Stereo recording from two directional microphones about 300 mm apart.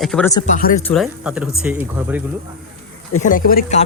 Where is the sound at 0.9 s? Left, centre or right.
Centre.